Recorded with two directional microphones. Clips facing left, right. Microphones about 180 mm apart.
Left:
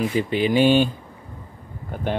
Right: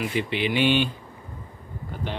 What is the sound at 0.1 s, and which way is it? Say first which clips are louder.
Speech: left 5 dB; 40° left (ahead or behind).